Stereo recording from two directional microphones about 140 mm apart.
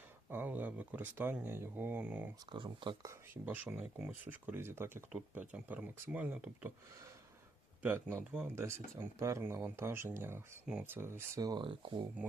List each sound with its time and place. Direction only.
0.3 s speech: 15° right (ahead or behind)
2.5 s speech: 35° right (ahead or behind); by 6.7 s 10° right (ahead or behind)
7.8 s speech: 10° right (ahead or behind); by 12.0 s 40° right (ahead or behind)